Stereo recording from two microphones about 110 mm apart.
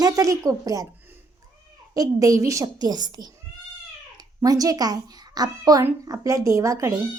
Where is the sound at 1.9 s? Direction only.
30° right (ahead or behind).